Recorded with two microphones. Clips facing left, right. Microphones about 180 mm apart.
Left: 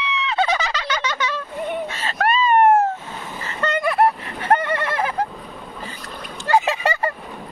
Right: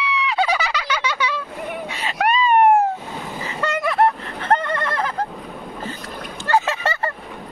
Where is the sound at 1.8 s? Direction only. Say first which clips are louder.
Even; 15° right (ahead or behind); by 5.3 s 10° left (ahead or behind).